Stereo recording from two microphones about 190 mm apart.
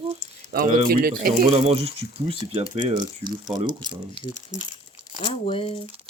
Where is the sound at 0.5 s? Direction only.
50° right (ahead or behind).